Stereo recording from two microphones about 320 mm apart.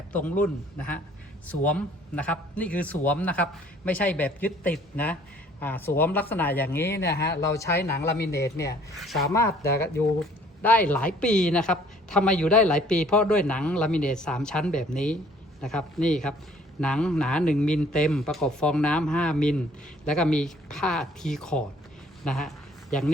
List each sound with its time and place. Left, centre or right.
0.1 s speech: centre
7.1 s speech: left
7.5 s speech: centre
22.2 s a sound: centre